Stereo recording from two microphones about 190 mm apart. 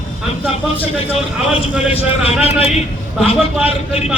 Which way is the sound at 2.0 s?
30° left (ahead or behind).